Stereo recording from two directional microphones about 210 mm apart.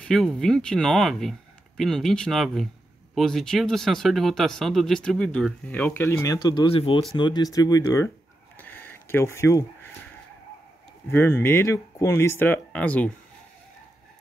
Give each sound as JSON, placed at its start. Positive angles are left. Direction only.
{"t": 0.0, "sound": "speech", "side_deg": 0}
{"t": 8.5, "sound": "a sound", "side_deg": 10}
{"t": 11.1, "sound": "speech", "side_deg": 10}